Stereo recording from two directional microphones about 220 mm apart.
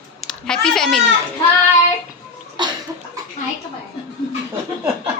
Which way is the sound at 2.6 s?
20° right (ahead or behind).